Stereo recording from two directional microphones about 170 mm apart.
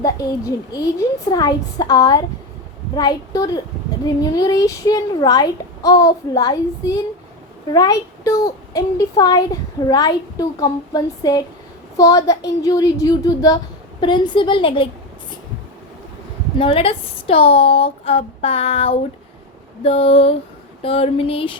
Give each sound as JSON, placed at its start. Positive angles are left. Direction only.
{"t": 0.0, "sound": "a child's voice", "side_deg": 20}
{"t": 16.6, "sound": "speech", "side_deg": 35}